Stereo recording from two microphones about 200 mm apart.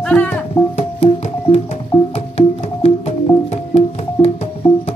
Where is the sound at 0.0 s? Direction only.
5° left (ahead or behind).